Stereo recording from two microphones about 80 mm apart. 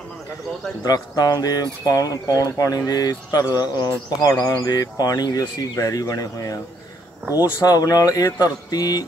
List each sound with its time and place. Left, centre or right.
0.8 s speech: left
7.6 s speech: left